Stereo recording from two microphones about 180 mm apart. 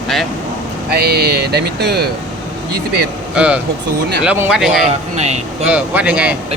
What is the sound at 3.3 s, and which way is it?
Speech, 5° right (ahead or behind).